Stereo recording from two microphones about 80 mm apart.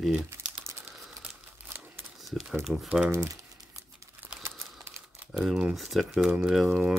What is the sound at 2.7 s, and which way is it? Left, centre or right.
Speech, centre.